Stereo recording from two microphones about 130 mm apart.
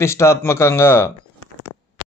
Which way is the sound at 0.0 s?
20° left (ahead or behind).